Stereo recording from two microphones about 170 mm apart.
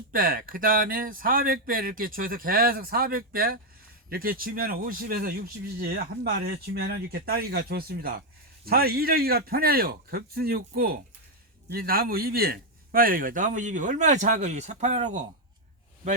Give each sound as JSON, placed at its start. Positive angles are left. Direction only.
{"t": 0.1, "sound": "a man's voice", "side_deg": -55}